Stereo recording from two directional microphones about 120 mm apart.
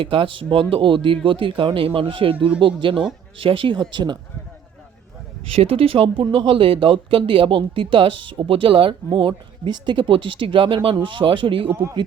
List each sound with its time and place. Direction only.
0.0 s speech: 50° right (ahead or behind)
5.5 s speech: 50° right (ahead or behind)
11.7 s speech: 20° right (ahead or behind)